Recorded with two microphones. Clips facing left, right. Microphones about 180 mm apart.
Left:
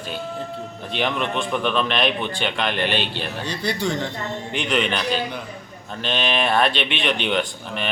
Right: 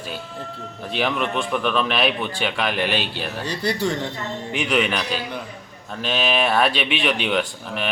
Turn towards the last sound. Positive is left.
turn(degrees=-5)  # may be behind; listen again after turning